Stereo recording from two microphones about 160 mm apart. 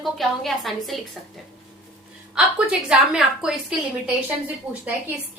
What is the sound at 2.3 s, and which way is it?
A woman's voice, 5° right (ahead or behind).